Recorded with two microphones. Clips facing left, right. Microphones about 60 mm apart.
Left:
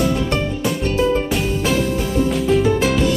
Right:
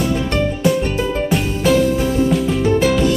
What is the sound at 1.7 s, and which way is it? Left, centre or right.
Music, centre.